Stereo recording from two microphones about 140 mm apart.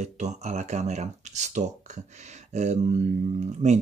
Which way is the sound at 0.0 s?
55° right (ahead or behind).